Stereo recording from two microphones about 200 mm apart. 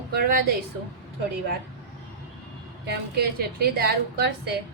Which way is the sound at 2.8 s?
55° right (ahead or behind).